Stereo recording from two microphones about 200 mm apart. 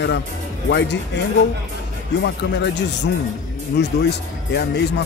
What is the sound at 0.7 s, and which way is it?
Speech, 60° left (ahead or behind).